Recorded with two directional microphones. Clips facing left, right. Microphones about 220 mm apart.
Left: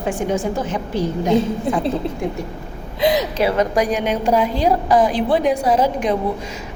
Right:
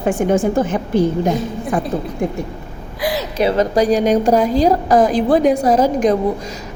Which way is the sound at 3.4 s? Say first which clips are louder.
Right 5 dB; 30° right (ahead or behind).